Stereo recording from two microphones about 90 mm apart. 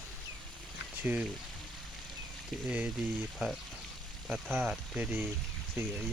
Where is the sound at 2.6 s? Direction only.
15° right (ahead or behind).